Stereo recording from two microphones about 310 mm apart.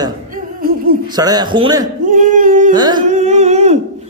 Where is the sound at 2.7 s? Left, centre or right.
Centre.